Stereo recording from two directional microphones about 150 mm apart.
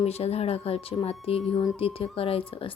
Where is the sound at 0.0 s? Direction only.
45° left (ahead or behind).